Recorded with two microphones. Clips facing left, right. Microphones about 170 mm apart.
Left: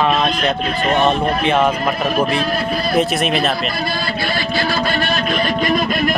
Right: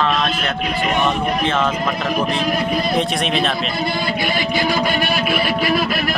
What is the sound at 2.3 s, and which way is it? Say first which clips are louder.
Speech: even; 15° right (ahead or behind).